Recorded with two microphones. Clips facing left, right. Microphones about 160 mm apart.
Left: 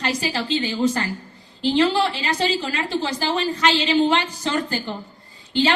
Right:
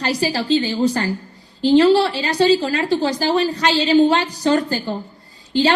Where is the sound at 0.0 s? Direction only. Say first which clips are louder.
Right 4 dB; 35° right (ahead or behind).